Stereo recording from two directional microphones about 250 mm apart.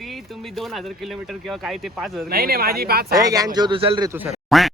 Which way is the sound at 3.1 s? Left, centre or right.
Centre.